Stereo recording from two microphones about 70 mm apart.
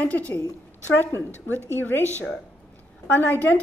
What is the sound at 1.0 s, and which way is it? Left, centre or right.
A woman's voice, left.